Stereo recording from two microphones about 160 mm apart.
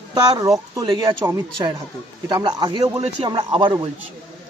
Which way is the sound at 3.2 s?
30° right (ahead or behind).